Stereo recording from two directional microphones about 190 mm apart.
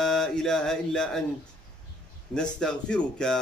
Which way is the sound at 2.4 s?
5° left (ahead or behind).